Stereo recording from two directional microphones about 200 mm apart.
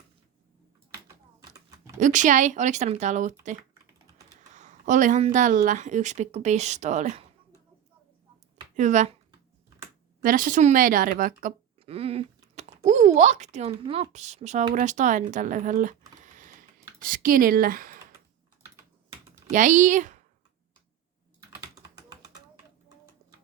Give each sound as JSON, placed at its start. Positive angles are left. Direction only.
{"t": 1.0, "sound": "typing", "side_deg": -15}
{"t": 2.0, "sound": "speech", "side_deg": -40}
{"t": 4.5, "sound": "speech", "side_deg": -35}
{"t": 8.7, "sound": "speech", "side_deg": -40}
{"t": 10.2, "sound": "speech", "side_deg": -40}
{"t": 11.8, "sound": "speech", "side_deg": -30}
{"t": 19.5, "sound": "speech", "side_deg": -40}
{"t": 21.8, "sound": "typing", "side_deg": -15}